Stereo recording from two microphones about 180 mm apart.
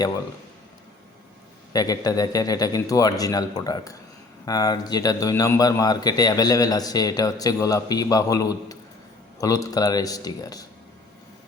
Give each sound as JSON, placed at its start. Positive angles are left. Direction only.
{"t": 1.7, "sound": "speech", "side_deg": 20}